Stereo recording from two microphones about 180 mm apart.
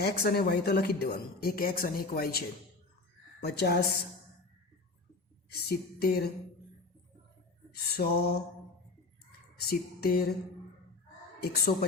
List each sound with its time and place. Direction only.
0.0 s speech: 60° left (ahead or behind)
3.4 s speech: 60° left (ahead or behind)
5.5 s speech: 60° left (ahead or behind)
7.7 s speech: 60° left (ahead or behind)
9.6 s speech: 60° left (ahead or behind)
11.3 s speech: 60° left (ahead or behind)